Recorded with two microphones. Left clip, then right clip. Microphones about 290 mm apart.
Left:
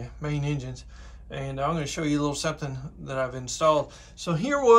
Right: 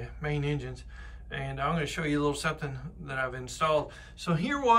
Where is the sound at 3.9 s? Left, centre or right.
Centre.